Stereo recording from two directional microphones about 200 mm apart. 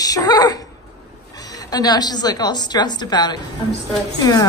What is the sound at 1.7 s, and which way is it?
A woman's voice, 20° left (ahead or behind).